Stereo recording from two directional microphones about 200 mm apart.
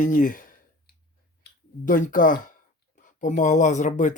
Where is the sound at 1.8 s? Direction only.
40° left (ahead or behind).